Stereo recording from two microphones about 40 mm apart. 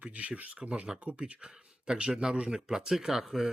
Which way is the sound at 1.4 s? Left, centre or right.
Right.